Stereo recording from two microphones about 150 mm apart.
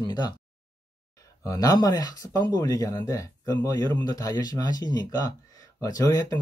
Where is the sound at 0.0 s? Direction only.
30° left (ahead or behind).